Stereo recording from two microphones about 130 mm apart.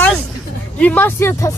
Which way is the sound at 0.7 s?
15° left (ahead or behind).